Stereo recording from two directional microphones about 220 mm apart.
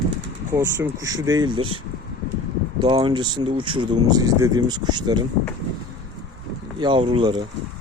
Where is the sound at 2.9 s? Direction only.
20° right (ahead or behind).